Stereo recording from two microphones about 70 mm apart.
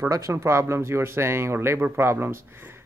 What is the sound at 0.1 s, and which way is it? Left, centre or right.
Speech, right.